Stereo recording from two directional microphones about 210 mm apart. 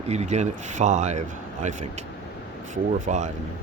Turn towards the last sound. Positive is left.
turn(degrees=-35)  # may be behind; listen again after turning